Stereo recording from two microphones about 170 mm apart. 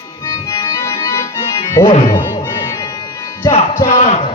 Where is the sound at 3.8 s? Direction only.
40° left (ahead or behind).